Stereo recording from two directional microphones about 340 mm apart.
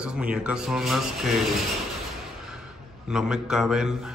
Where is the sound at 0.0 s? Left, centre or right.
Centre.